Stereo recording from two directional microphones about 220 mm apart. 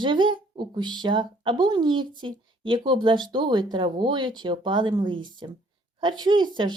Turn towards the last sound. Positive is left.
turn(degrees=-20)  # may be behind; listen again after turning